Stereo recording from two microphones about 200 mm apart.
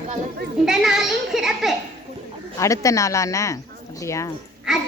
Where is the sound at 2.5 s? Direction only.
15° left (ahead or behind).